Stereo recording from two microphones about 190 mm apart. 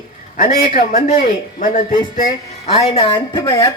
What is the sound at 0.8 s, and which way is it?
Speech, 50° left (ahead or behind).